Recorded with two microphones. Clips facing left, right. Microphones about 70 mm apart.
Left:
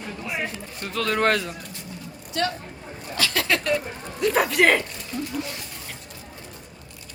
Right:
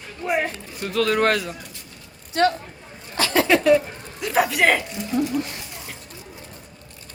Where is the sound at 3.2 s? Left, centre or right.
Right.